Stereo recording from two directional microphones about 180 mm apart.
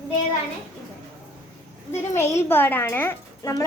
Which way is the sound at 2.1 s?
15° left (ahead or behind).